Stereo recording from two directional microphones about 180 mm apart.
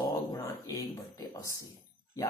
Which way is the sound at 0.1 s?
20° left (ahead or behind).